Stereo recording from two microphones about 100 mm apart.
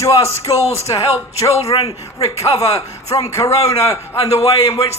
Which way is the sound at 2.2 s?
90° left.